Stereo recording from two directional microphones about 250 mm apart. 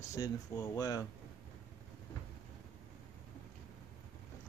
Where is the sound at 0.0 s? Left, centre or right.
Centre.